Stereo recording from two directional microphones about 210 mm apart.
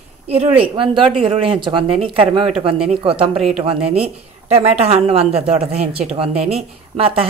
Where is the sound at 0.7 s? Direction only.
25° right (ahead or behind).